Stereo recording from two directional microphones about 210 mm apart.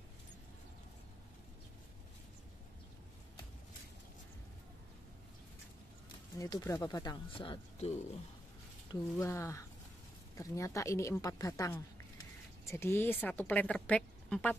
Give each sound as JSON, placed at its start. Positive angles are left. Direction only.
{"t": 6.3, "sound": "speech", "side_deg": 15}
{"t": 9.2, "sound": "a woman's voice", "side_deg": 15}